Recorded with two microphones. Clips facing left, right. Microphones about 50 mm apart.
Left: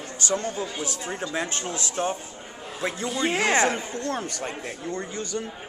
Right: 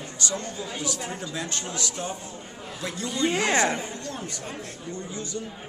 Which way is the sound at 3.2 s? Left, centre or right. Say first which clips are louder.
Even; centre.